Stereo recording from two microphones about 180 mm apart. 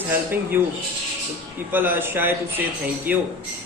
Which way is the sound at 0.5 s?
10° right (ahead or behind).